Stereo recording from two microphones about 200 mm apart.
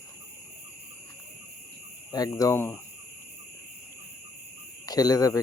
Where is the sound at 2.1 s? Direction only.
20° left (ahead or behind).